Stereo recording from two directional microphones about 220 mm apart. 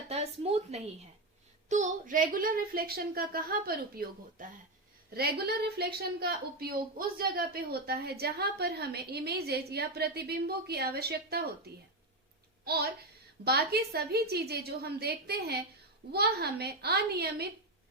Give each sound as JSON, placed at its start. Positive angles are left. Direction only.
{"t": 0.1, "sound": "a woman's voice", "side_deg": -30}
{"t": 12.6, "sound": "a child's voice", "side_deg": -45}